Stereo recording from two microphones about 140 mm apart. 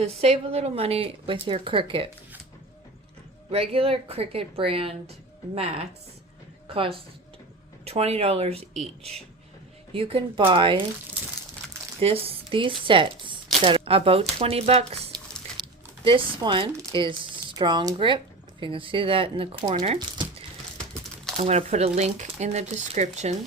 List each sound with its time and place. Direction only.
0.0 s speech: 45° right (ahead or behind)
3.5 s speech: 40° right (ahead or behind)
11.9 s speech: 45° right (ahead or behind)
15.1 s biting: 30° right (ahead or behind)
15.6 s a sound: 35° right (ahead or behind)
16.0 s speech: 35° right (ahead or behind)
21.3 s speech: 50° right (ahead or behind)